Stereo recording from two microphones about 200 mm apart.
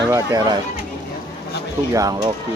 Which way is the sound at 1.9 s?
15° right (ahead or behind).